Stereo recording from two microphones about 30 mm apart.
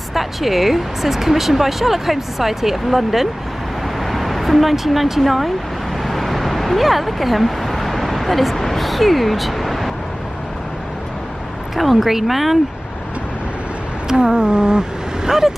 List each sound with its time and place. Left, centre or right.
0.1 s speech: centre
4.0 s vehicle: centre
5.2 s speech: centre
6.0 s a sound: centre
11.7 s speech: centre
14.0 s speech: right